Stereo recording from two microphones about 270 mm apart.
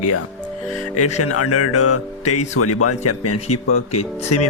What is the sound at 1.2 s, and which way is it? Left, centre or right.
Speech, left.